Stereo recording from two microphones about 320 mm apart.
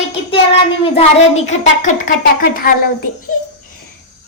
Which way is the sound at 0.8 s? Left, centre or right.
Centre.